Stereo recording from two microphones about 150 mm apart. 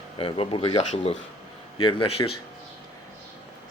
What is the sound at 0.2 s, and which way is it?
Speech, 35° left (ahead or behind).